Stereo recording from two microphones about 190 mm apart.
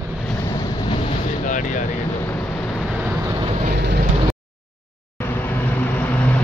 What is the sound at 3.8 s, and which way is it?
Vehicle, 60° right (ahead or behind).